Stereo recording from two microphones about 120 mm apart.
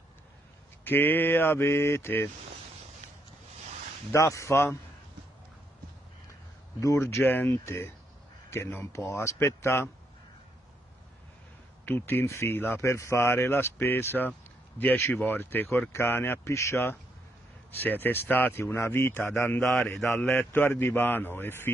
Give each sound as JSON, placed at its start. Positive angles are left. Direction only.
{"t": 0.8, "sound": "speech", "side_deg": 15}
{"t": 4.1, "sound": "speech", "side_deg": 25}
{"t": 6.8, "sound": "speech", "side_deg": 25}
{"t": 11.8, "sound": "speech", "side_deg": 15}
{"t": 19.6, "sound": "a man's voice", "side_deg": 0}
{"t": 20.2, "sound": "speech", "side_deg": 15}